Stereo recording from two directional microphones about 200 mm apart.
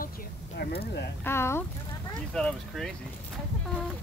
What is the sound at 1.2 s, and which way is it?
Speech, 10° left (ahead or behind).